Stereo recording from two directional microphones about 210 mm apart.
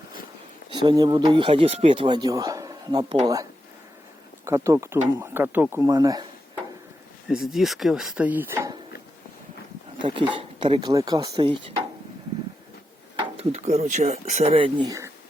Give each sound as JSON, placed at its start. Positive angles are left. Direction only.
{"t": 0.7, "sound": "speech", "side_deg": -20}
{"t": 4.4, "sound": "speech", "side_deg": -15}
{"t": 7.3, "sound": "speech", "side_deg": 0}
{"t": 10.0, "sound": "speech", "side_deg": -25}
{"t": 13.1, "sound": "speech", "side_deg": -30}